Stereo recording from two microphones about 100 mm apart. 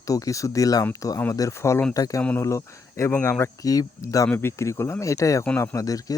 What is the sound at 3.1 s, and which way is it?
Speech, 20° left (ahead or behind).